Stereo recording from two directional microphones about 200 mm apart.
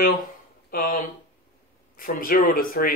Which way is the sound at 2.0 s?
45° left (ahead or behind).